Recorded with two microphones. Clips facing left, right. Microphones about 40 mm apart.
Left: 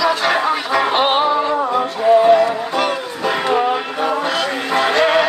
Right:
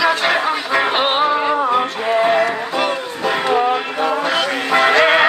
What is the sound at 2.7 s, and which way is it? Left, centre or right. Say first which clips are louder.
Music: even; centre.